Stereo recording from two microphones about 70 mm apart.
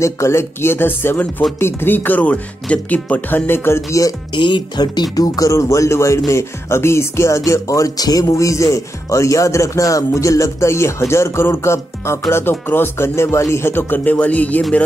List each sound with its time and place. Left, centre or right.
0.0 s speech: left
4.8 s speech: left
5.5 s speech: left
8.3 s speech: left